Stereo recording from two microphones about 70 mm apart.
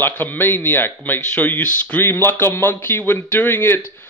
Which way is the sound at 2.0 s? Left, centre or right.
Left.